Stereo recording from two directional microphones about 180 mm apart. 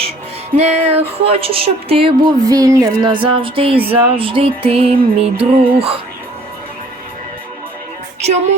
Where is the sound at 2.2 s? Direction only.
20° right (ahead or behind).